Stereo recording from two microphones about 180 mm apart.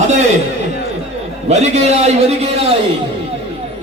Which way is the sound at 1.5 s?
40° right (ahead or behind).